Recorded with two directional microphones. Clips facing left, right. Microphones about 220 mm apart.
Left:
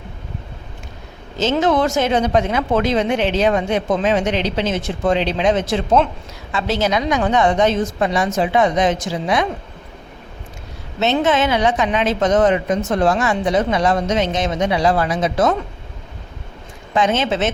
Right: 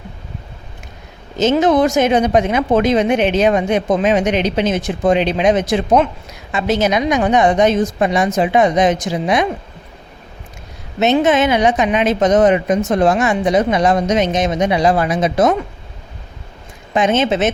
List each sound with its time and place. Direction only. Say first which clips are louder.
1.4 s speech: right 4 dB; 20° right (ahead or behind)
11.0 s speech: right 4 dB; 20° right (ahead or behind)
16.9 s speech: right 3 dB; 20° right (ahead or behind)